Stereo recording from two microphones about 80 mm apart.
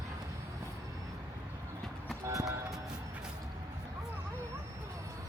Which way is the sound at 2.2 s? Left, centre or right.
Right.